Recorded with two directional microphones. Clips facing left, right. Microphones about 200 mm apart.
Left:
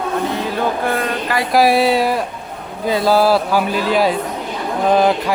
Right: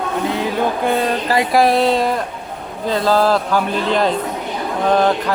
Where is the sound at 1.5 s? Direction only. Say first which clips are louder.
Left 2 dB; 5° left (ahead or behind).